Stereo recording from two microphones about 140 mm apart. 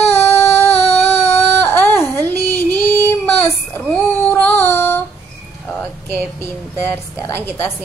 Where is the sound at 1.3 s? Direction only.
15° left (ahead or behind).